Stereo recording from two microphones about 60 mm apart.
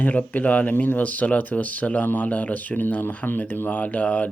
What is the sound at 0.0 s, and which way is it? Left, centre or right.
Speech, left.